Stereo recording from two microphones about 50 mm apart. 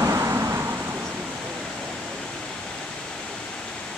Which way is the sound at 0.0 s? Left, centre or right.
Right.